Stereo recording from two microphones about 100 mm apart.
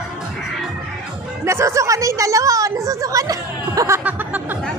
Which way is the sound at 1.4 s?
30° right (ahead or behind).